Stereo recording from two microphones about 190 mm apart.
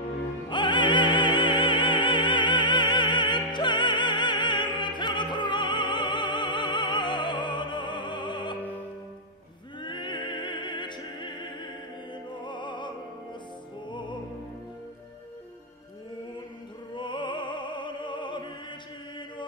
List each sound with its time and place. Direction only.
0.5 s music: 25° left (ahead or behind)
9.8 s opera: 25° left (ahead or behind)
12.1 s music: 25° left (ahead or behind)
16.9 s opera: 25° left (ahead or behind)